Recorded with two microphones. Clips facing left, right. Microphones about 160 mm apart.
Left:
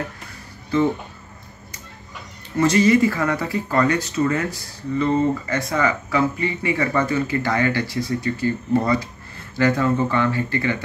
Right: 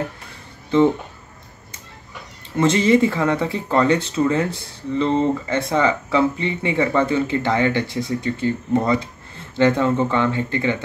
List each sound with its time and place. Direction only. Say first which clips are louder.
2.5 s speech: even; 25° right (ahead or behind)